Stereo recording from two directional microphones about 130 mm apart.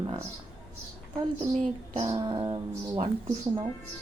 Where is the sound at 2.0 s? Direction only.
50° right (ahead or behind).